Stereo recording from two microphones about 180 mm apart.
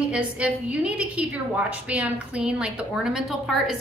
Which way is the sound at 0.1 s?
5° right (ahead or behind).